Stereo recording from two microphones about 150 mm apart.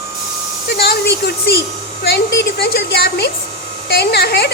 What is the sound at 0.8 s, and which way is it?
A woman's voice, 90° left.